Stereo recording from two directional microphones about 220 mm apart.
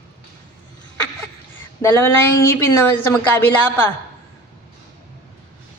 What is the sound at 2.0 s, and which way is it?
A woman's voice, 10° left (ahead or behind).